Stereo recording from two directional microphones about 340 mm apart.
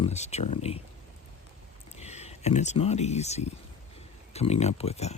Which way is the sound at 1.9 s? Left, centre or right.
Centre.